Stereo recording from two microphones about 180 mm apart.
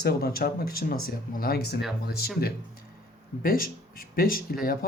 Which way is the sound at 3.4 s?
50° left (ahead or behind).